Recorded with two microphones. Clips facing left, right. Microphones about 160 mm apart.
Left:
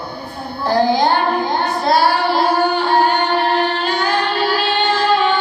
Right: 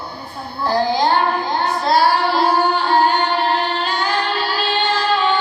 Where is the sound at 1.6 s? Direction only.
60° left (ahead or behind).